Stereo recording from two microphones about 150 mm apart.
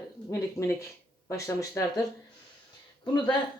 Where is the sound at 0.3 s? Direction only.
20° left (ahead or behind).